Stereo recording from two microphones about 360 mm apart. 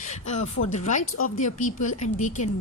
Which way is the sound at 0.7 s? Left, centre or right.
Centre.